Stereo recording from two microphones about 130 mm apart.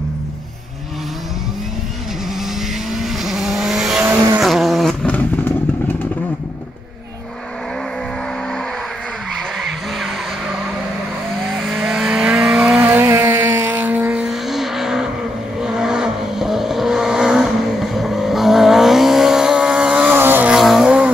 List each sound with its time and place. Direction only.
2.9 s vehicle: centre (ahead or behind)
4.0 s vehicle: 15° right (ahead or behind)
4.4 s vehicle: 5° right (ahead or behind)
11.3 s vehicle: centre (ahead or behind); by 20.5 s 15° right (ahead or behind)
20.5 s vehicle: centre (ahead or behind)